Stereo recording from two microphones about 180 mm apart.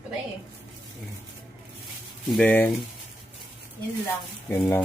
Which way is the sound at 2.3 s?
5° left (ahead or behind).